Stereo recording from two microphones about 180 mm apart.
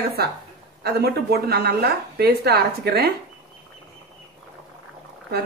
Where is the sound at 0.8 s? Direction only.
60° right (ahead or behind).